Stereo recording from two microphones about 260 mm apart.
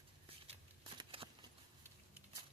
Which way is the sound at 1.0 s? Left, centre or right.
Right.